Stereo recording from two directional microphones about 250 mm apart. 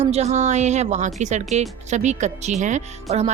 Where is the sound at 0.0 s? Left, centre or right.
Right.